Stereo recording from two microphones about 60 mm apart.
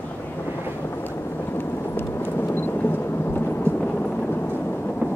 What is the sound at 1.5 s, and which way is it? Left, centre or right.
Thunder, left.